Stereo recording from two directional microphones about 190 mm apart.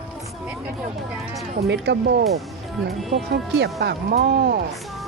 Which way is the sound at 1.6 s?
60° right (ahead or behind).